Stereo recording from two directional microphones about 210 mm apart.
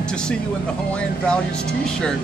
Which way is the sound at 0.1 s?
5° left (ahead or behind).